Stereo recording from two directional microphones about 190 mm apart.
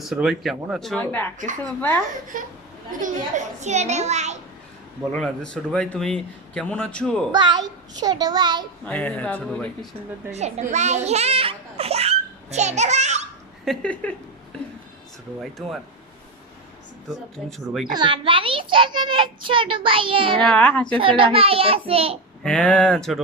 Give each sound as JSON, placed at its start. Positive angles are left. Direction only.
{"t": 0.0, "sound": "a man's voice", "side_deg": -5}
{"t": 2.3, "sound": "a woman's voice", "side_deg": -45}
{"t": 5.1, "sound": "a man's voice", "side_deg": 5}
{"t": 7.3, "sound": "a child's voice", "side_deg": -25}
{"t": 8.8, "sound": "speech", "side_deg": 5}
{"t": 10.3, "sound": "a child's voice", "side_deg": -35}
{"t": 13.7, "sound": "speech", "side_deg": 5}
{"t": 15.4, "sound": "a man's voice", "side_deg": 0}
{"t": 17.4, "sound": "a man's voice", "side_deg": -5}
{"t": 17.9, "sound": "a child's voice", "side_deg": -25}
{"t": 20.4, "sound": "speech", "side_deg": 5}
{"t": 21.0, "sound": "a woman's voice", "side_deg": -30}
{"t": 22.4, "sound": "a man's voice", "side_deg": 5}